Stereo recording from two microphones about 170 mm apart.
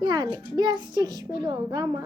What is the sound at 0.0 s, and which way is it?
A child's voice, 25° right (ahead or behind).